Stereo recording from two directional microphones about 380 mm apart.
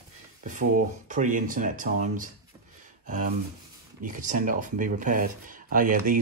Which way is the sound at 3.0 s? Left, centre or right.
Centre.